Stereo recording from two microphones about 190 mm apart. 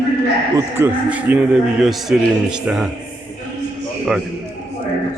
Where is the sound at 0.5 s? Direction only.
10° right (ahead or behind).